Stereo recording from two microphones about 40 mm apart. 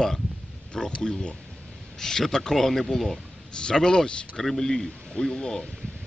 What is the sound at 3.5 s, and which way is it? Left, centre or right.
A man's voice, centre.